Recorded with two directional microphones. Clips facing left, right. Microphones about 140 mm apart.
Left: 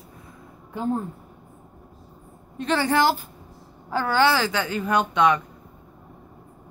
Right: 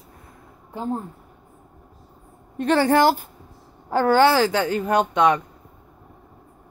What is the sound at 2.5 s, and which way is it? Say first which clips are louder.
A woman's voice: right 4 dB; 50° right (ahead or behind).